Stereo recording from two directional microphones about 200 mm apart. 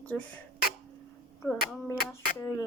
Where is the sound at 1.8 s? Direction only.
10° left (ahead or behind).